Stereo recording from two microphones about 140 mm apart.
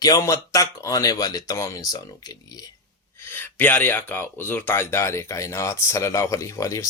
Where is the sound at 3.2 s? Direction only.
15° left (ahead or behind).